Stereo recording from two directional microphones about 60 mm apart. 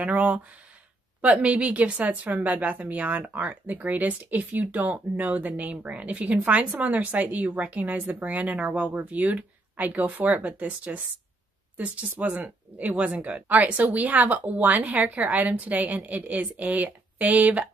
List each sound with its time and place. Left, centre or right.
0.0 s speech: right